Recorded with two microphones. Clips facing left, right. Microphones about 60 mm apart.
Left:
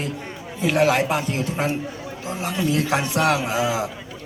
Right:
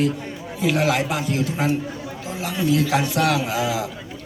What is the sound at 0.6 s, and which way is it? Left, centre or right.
Speech, left.